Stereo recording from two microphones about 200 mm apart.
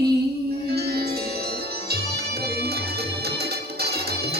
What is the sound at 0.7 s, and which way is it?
Music, 50° right (ahead or behind).